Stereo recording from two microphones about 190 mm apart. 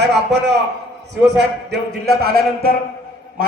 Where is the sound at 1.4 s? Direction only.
60° right (ahead or behind).